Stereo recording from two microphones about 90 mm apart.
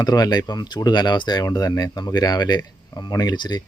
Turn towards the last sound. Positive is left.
turn(degrees=55)  # may be behind; listen again after turning